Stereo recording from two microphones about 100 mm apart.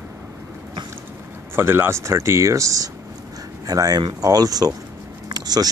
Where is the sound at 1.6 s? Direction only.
25° right (ahead or behind).